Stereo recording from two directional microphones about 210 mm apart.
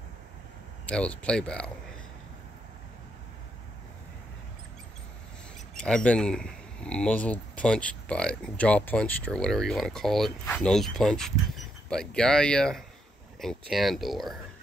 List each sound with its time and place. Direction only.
0.8 s speech: 5° left (ahead or behind)
5.8 s speech: 5° left (ahead or behind)